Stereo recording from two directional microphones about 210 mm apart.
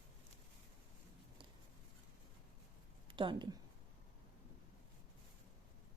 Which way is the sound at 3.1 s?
20° right (ahead or behind).